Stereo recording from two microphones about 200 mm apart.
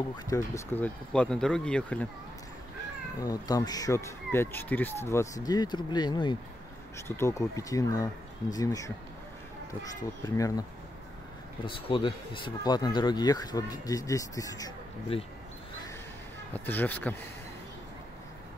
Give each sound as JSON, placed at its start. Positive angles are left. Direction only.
{"t": 0.2, "sound": "speech", "side_deg": 15}
{"t": 3.2, "sound": "speech", "side_deg": 15}
{"t": 10.2, "sound": "speech", "side_deg": 15}
{"t": 11.6, "sound": "speech", "side_deg": 25}
{"t": 16.5, "sound": "speech", "side_deg": 10}